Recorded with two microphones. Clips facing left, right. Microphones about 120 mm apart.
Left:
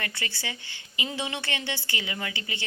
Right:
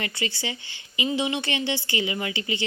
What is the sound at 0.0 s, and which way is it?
A woman's voice, 20° right (ahead or behind).